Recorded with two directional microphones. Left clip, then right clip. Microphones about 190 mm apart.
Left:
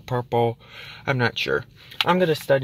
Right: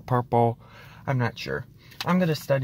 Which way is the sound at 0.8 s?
10° left (ahead or behind).